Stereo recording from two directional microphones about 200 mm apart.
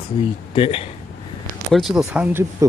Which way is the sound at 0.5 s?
25° left (ahead or behind).